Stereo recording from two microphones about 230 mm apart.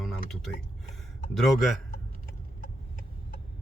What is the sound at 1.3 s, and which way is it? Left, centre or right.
Speech, centre.